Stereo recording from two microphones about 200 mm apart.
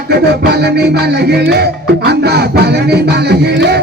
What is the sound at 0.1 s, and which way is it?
Music, 55° right (ahead or behind).